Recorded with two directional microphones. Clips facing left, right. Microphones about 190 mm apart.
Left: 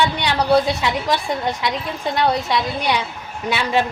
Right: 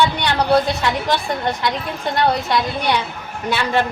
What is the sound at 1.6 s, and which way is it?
A woman's voice, centre (ahead or behind).